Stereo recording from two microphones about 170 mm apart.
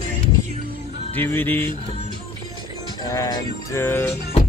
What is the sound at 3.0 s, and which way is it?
Music, 20° left (ahead or behind).